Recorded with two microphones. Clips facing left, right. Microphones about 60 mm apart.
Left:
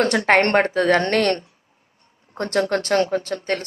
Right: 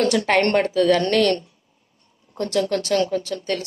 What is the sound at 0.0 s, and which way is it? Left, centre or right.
A woman's voice, left.